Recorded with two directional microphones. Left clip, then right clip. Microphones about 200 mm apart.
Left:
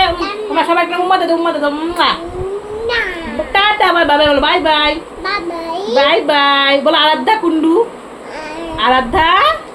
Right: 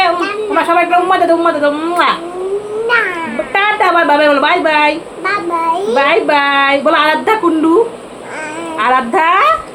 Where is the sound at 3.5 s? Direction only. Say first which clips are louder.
Even; 10° left (ahead or behind).